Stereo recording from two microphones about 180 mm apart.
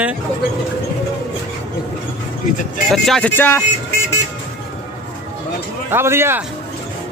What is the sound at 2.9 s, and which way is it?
Speech, centre (ahead or behind).